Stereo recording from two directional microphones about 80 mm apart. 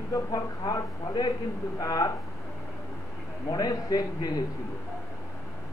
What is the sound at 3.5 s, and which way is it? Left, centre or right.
Speech, left.